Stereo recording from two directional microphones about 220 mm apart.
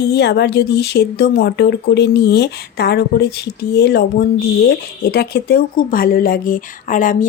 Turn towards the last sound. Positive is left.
turn(degrees=40)  # may be behind; listen again after turning